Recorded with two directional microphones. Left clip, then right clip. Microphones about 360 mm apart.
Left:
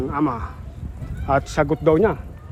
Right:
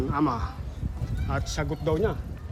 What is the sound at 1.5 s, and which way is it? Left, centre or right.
Speech, centre.